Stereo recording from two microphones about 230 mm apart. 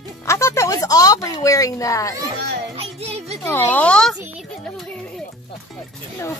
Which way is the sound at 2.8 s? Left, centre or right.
Right.